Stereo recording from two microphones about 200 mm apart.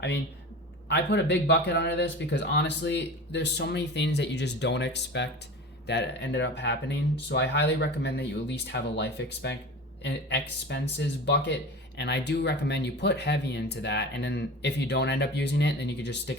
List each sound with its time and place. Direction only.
0.9 s speech: 60° left (ahead or behind)